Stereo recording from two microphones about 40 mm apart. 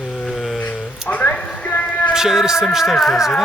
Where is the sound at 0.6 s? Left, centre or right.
Left.